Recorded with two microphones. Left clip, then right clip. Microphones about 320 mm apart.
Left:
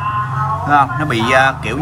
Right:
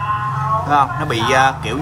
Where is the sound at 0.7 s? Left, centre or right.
Centre.